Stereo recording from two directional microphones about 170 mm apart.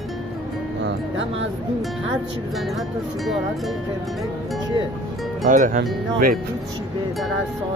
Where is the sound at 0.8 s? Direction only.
90° right.